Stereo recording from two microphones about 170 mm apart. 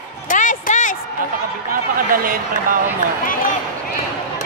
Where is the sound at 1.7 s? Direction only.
55° right (ahead or behind).